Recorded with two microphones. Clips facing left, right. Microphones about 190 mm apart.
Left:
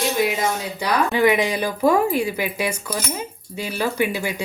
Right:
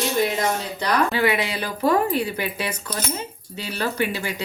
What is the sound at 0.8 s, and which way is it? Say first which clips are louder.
Speech: left 3 dB; 15° left (ahead or behind).